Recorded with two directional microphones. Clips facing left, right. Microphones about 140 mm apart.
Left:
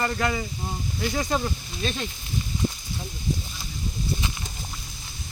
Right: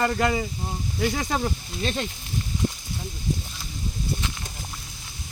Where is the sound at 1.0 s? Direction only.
55° right (ahead or behind).